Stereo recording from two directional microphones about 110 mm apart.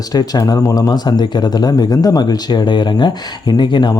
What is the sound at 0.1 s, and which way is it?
Speech, 35° left (ahead or behind).